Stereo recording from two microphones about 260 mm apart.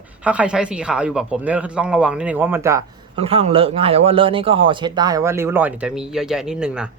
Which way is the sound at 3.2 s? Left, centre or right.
Right.